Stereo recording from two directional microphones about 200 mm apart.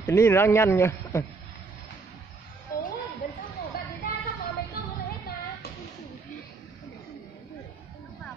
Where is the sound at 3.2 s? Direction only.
45° left (ahead or behind).